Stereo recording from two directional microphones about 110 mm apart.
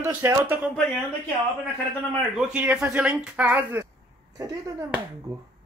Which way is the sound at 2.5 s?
10° right (ahead or behind).